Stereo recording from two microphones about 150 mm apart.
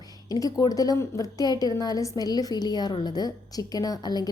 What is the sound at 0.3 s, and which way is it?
A woman's voice, 25° left (ahead or behind).